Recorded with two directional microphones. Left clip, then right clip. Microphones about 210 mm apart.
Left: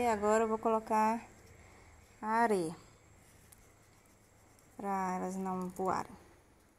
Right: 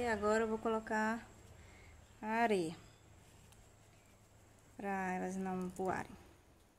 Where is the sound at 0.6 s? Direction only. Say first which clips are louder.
Left 6 dB; centre (ahead or behind).